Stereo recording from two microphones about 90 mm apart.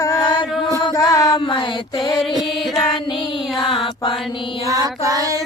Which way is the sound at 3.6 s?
70° left (ahead or behind).